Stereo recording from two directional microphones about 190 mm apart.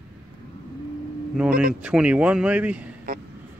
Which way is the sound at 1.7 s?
5° right (ahead or behind).